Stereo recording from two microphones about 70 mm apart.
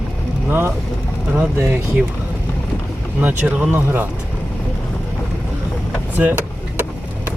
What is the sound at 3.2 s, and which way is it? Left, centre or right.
Speech, right.